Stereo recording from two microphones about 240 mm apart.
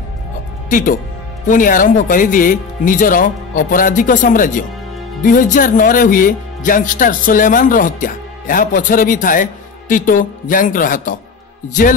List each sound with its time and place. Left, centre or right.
0.7 s speech: left